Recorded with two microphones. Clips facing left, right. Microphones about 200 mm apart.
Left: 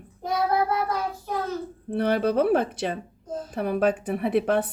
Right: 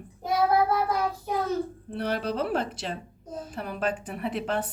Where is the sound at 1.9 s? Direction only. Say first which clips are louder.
Left 7 dB; 55° left (ahead or behind).